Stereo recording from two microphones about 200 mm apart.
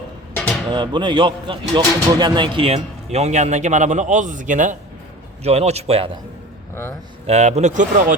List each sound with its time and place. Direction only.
0.3 s a sound: 5° left (ahead or behind)
0.7 s speech: 25° right (ahead or behind)
7.3 s speech: 35° right (ahead or behind)